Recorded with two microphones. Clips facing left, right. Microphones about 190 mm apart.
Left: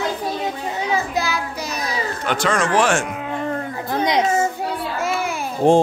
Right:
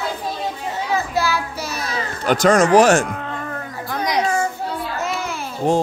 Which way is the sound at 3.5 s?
25° left (ahead or behind).